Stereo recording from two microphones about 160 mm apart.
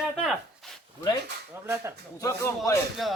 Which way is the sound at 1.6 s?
15° right (ahead or behind).